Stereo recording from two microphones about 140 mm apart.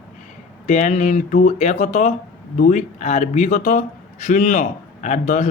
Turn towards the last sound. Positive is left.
turn(degrees=60)  # may be behind; listen again after turning